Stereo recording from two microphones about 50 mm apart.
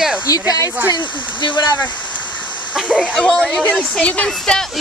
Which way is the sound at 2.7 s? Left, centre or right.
Right.